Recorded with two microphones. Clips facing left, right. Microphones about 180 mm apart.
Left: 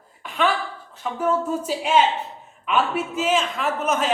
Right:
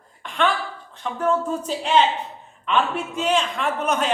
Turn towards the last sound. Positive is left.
turn(degrees=0)  # may be behind; listen again after turning